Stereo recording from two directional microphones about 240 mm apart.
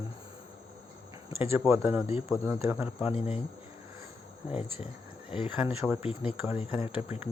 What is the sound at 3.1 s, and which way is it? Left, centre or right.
Speech, left.